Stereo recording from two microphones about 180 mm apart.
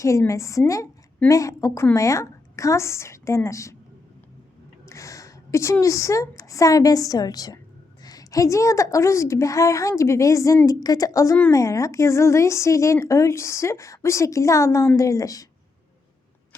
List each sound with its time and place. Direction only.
0.0 s a woman's voice: 15° left (ahead or behind)
4.9 s a woman's voice: 15° left (ahead or behind)